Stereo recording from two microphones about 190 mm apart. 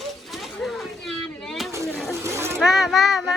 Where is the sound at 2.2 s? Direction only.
15° right (ahead or behind).